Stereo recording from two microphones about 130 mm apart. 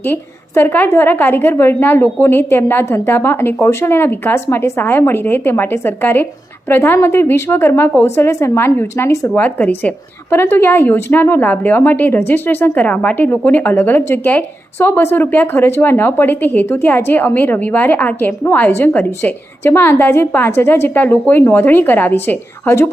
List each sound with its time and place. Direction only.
0.0 s a woman's voice: 15° left (ahead or behind)
9.4 s a woman's voice: 10° left (ahead or behind)